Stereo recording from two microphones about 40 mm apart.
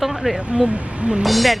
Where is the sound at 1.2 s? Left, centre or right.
Centre.